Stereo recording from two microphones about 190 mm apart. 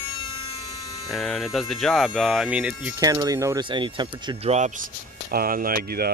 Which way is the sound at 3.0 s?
20° right (ahead or behind).